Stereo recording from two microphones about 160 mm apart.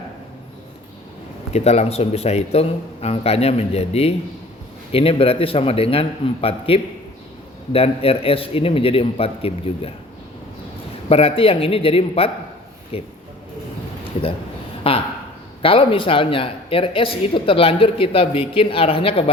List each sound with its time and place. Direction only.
1.5 s speech: 40° left (ahead or behind)
11.1 s speech: 40° left (ahead or behind)
14.8 s speech: 35° left (ahead or behind)